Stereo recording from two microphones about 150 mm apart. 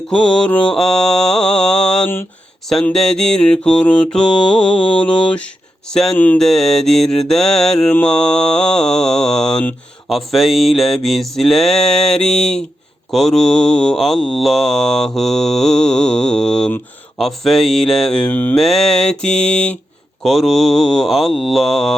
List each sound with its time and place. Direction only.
0.1 s mantra: 5° left (ahead or behind)
4.4 s mantra: 35° left (ahead or behind)
5.2 s mantra: 10° left (ahead or behind)
18.6 s mantra: centre (ahead or behind)